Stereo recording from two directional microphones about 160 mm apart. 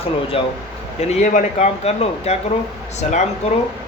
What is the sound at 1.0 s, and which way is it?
Speech, 55° left (ahead or behind).